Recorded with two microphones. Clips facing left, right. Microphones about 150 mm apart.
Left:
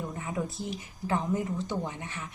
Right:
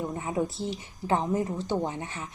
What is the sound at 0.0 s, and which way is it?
Speech, 25° right (ahead or behind).